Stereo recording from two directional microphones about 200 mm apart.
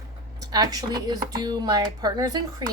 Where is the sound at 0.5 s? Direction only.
20° right (ahead or behind).